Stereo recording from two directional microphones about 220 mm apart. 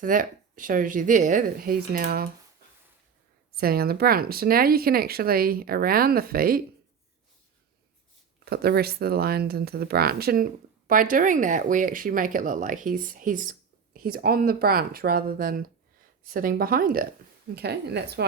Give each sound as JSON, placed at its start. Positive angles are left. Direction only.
{"t": 0.0, "sound": "speech", "side_deg": -35}
{"t": 3.6, "sound": "speech", "side_deg": -45}
{"t": 8.4, "sound": "speech", "side_deg": -45}